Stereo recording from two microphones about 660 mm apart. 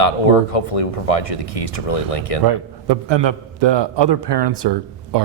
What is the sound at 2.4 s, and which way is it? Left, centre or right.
Speech, right.